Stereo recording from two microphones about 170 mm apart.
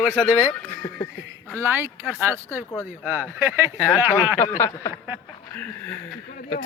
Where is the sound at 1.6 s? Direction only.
15° right (ahead or behind).